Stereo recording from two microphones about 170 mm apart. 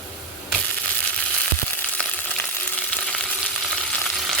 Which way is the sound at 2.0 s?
5° left (ahead or behind).